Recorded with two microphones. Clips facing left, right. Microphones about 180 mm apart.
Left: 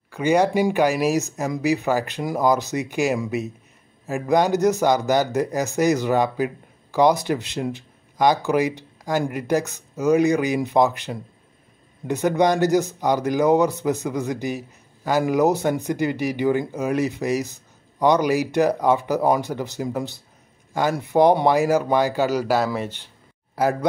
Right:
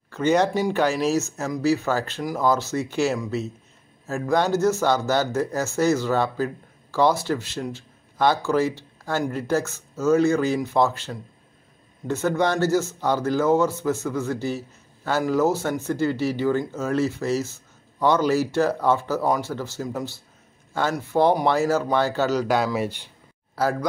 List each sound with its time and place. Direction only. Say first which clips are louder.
0.1 s speech: left 1 dB; 10° left (ahead or behind)
22.8 s speech: right 2 dB; 10° right (ahead or behind)
23.5 s a man's voice: left 3 dB; 20° left (ahead or behind)